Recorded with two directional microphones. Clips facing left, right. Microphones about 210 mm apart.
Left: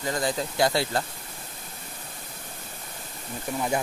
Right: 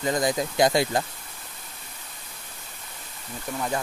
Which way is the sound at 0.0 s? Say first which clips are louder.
Right 3 dB; 15° right (ahead or behind).